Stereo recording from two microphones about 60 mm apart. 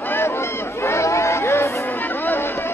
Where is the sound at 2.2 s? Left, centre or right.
Left.